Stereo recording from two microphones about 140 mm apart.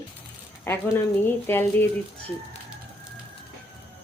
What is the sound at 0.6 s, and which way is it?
Speech, 15° left (ahead or behind).